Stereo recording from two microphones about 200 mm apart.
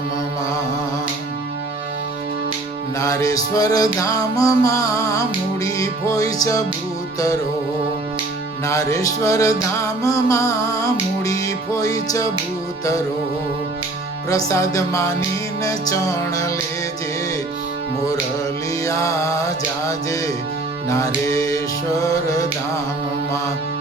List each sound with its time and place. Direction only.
3.0 s music: 15° left (ahead or behind)
8.6 s music: 15° left (ahead or behind)
14.3 s music: 15° left (ahead or behind)
18.9 s music: 15° left (ahead or behind)